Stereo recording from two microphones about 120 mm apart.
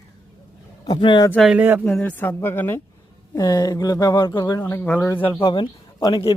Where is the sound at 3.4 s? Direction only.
35° left (ahead or behind).